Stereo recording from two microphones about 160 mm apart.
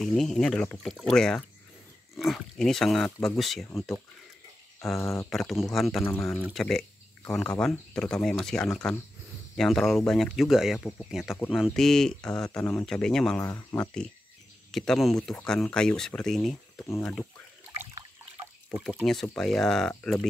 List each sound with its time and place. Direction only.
0.0 s speech: centre (ahead or behind)
4.9 s speech: 15° left (ahead or behind)
5.3 s speech: centre (ahead or behind)
6.0 s speech: 10° left (ahead or behind)
13.5 s speech: 15° left (ahead or behind)
18.7 s speech: centre (ahead or behind)